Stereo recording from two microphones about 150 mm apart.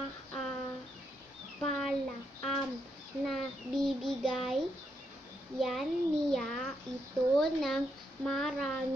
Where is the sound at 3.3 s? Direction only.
Centre (ahead or behind).